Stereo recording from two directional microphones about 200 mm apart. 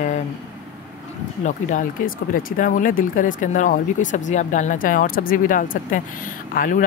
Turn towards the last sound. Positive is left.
turn(degrees=40)  # may be behind; listen again after turning